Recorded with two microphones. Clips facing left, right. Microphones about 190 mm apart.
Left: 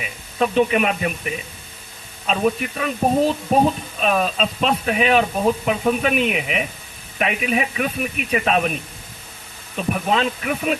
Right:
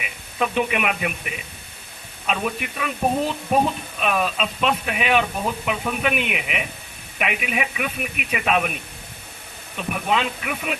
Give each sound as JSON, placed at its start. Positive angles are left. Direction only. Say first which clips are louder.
{"t": 0.0, "sound": "speech", "louder": "left 4 dB", "side_deg": 35}